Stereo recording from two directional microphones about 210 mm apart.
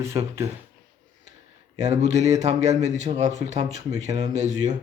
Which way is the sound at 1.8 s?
35° right (ahead or behind).